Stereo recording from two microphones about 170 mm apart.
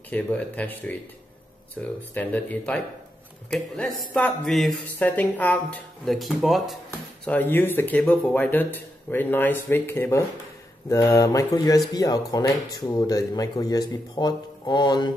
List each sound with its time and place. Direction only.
0.1 s speech: 10° left (ahead or behind)
7.2 s speech: 10° left (ahead or behind)